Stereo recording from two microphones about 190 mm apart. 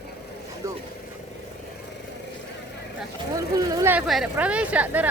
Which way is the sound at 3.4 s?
15° right (ahead or behind).